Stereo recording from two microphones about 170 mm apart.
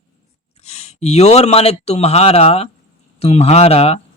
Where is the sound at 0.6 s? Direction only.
40° left (ahead or behind).